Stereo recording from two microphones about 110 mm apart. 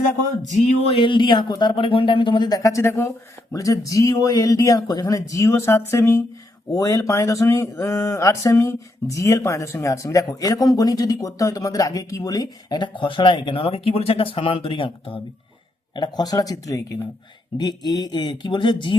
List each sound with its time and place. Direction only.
0.4 s a sound: 90° left
0.9 s speech: 50° left (ahead or behind)
16.0 s speech: 40° left (ahead or behind)